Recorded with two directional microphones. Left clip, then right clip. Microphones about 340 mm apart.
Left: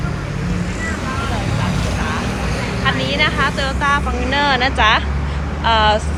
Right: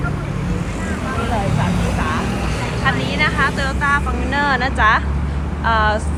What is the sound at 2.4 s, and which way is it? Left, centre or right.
Vehicle, right.